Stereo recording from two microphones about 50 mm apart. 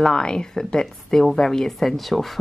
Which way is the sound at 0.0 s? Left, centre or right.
Centre.